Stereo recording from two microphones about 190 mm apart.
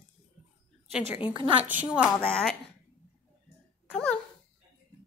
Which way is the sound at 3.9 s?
5° left (ahead or behind).